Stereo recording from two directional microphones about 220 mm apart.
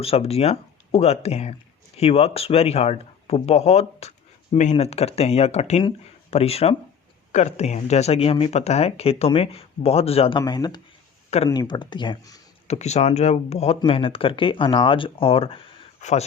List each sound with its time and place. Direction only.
0.0 s speech: 25° left (ahead or behind)
12.6 s speech: 30° left (ahead or behind)